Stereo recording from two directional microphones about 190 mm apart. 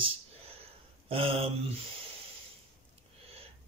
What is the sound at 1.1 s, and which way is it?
Speech, 30° right (ahead or behind).